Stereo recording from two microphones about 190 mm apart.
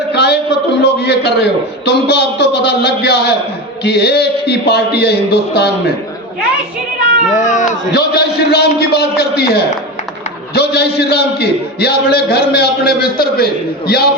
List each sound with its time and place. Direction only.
0.1 s a sound: 60° left (ahead or behind)
0.8 s a man's voice: 60° left (ahead or behind)
7.3 s cat: 40° left (ahead or behind)
7.9 s a man's voice: 60° left (ahead or behind)